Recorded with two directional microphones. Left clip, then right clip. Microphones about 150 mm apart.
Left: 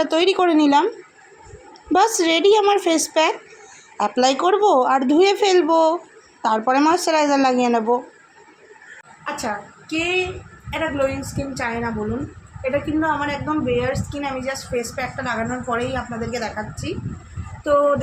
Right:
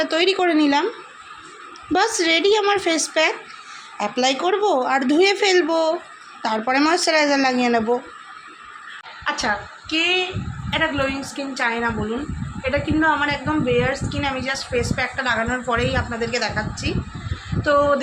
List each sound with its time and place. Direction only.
0.0 s a woman's voice: 15° left (ahead or behind)
1.9 s a woman's voice: 15° left (ahead or behind)
9.2 s a woman's voice: 10° left (ahead or behind)